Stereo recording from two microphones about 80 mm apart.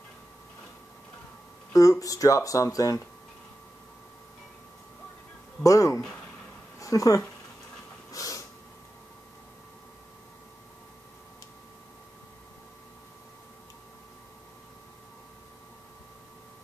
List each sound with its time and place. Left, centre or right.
1.7 s speech: left
5.6 s speech: left
8.1 s snort: left